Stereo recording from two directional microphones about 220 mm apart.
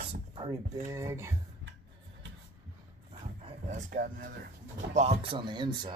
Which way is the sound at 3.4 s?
35° right (ahead or behind).